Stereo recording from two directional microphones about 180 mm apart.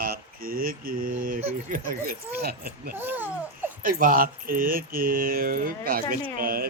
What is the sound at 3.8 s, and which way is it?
Speech, 50° right (ahead or behind).